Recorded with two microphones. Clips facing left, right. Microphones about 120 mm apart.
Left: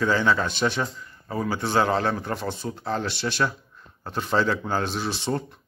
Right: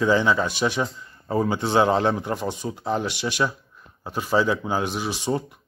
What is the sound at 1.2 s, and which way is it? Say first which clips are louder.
A man's voice: right 4 dB; 30° right (ahead or behind).